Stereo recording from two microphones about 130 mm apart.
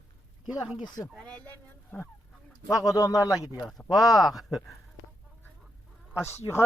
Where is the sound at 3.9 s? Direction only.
Centre (ahead or behind).